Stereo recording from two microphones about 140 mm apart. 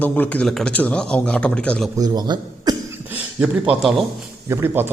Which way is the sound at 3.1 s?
5° right (ahead or behind).